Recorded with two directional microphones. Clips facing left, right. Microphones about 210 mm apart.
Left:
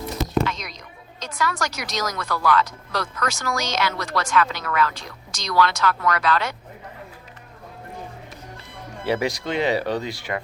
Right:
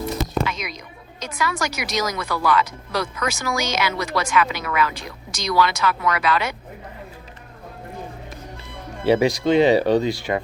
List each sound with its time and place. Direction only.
0.4 s a sound: 5° right (ahead or behind)
1.2 s speech: 5° right (ahead or behind)
9.0 s speech: 25° right (ahead or behind)